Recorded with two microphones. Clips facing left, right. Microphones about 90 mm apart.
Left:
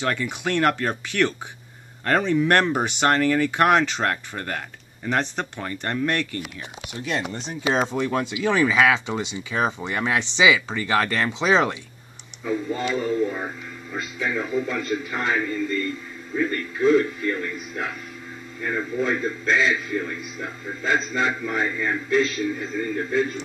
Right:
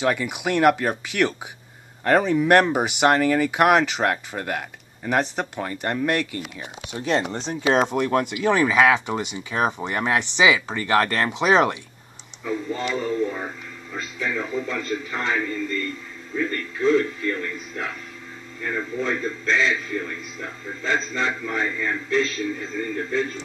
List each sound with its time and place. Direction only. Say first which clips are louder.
0.0 s speech: right 2 dB; 10° right (ahead or behind)
7.1 s speech: right 5 dB; 35° right (ahead or behind)
7.6 s speech: right 2 dB; 60° right (ahead or behind)
8.7 s speech: right 2 dB; 10° right (ahead or behind)
11.3 s speech: right 2 dB; 60° right (ahead or behind)
12.4 s a man's voice: left 1 dB; 10° left (ahead or behind)